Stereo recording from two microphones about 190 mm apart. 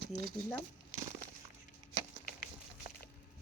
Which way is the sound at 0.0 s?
55° right (ahead or behind).